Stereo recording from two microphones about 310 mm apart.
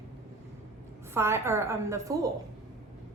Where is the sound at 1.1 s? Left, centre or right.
Centre.